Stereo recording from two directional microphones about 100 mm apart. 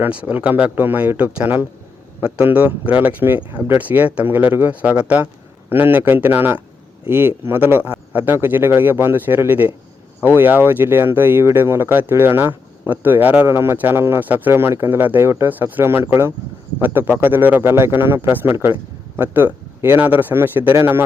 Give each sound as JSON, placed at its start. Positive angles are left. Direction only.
{"t": 0.0, "sound": "speech", "side_deg": -15}